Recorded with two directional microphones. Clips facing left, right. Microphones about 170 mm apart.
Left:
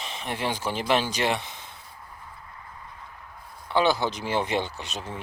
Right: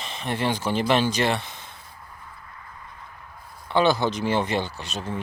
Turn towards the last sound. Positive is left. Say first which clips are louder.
# right 4 dB
turn(degrees=15)  # may be behind; listen again after turning